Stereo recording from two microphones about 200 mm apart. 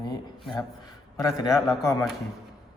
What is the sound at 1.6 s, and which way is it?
Speech, 15° left (ahead or behind).